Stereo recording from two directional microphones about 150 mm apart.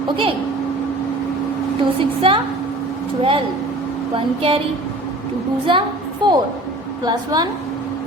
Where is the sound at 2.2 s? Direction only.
35° right (ahead or behind).